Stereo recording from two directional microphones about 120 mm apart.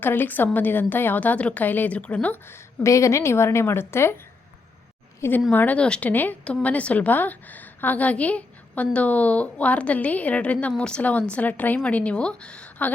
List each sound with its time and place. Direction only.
0.0 s a woman's voice: 15° left (ahead or behind)
5.5 s a woman's voice: 15° left (ahead or behind)